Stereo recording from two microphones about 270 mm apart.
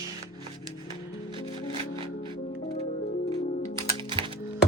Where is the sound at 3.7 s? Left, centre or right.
Centre.